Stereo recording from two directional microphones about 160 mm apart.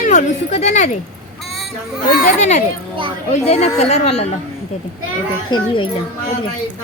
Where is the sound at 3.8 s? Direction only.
40° left (ahead or behind).